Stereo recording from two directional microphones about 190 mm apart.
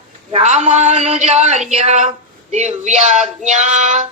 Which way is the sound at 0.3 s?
35° right (ahead or behind).